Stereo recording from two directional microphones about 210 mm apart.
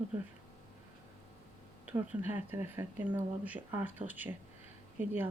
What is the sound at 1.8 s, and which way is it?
Speech, 5° right (ahead or behind).